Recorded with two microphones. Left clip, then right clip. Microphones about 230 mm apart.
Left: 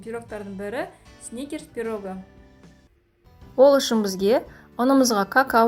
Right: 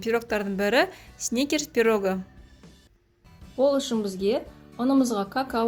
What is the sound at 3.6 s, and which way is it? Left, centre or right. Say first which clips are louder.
Speech: left 7 dB; left.